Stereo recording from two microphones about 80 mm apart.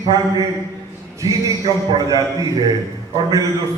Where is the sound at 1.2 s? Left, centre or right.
Right.